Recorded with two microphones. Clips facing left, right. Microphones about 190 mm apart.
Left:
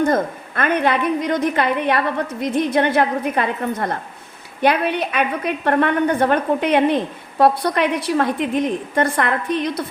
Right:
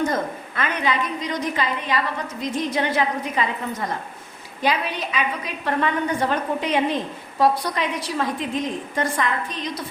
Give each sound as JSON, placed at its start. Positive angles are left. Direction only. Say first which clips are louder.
{"t": 0.0, "sound": "a woman's voice", "louder": "left 5 dB", "side_deg": 55}